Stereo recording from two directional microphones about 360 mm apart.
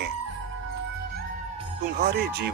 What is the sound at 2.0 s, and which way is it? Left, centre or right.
Speech, right.